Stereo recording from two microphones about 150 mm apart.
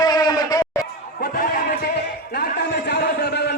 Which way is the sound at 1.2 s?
70° left (ahead or behind).